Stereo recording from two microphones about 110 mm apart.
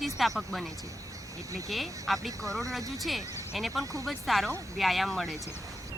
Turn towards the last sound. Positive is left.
turn(degrees=0)  # may be behind; listen again after turning